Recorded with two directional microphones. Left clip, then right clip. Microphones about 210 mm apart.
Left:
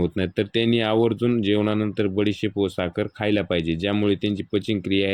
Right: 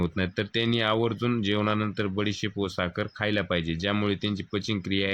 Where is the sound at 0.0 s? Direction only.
10° left (ahead or behind).